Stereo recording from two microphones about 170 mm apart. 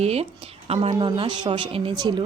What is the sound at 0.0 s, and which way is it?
Speech, 35° right (ahead or behind).